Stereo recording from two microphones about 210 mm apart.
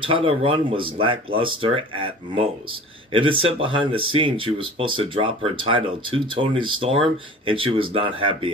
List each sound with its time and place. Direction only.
0.0 s speech: 25° right (ahead or behind)